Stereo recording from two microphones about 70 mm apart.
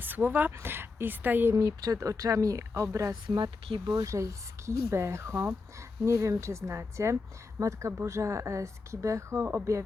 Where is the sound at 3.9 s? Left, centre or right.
Right.